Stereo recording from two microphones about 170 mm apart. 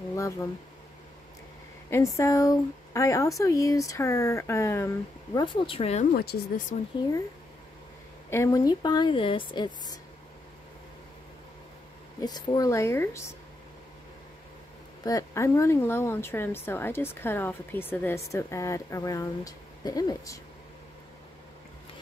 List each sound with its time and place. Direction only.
0.1 s a sound: 20° left (ahead or behind)
1.9 s speech: 15° left (ahead or behind)
5.4 s speech: 30° left (ahead or behind)
6.1 s speech: 60° left (ahead or behind)
8.3 s a woman's voice: 15° left (ahead or behind)
12.2 s speech: 25° left (ahead or behind)
15.0 s speech: 20° left (ahead or behind)